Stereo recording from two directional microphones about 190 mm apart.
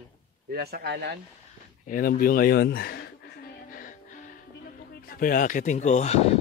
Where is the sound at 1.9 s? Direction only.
50° left (ahead or behind).